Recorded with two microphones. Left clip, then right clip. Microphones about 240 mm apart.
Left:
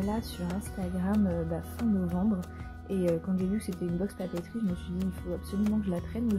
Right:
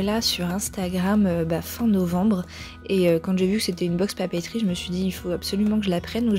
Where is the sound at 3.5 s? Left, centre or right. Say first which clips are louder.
Right 10 dB; right.